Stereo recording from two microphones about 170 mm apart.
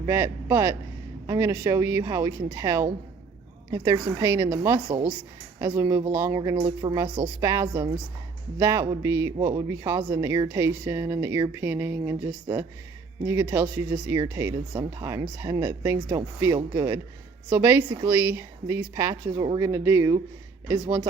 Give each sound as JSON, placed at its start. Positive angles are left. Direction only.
{"t": 0.0, "sound": "speech", "side_deg": -15}